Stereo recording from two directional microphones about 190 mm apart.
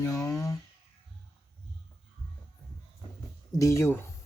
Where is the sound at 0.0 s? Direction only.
15° left (ahead or behind).